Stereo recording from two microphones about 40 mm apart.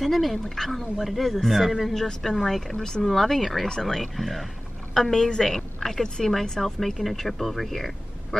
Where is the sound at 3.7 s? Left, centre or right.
Centre.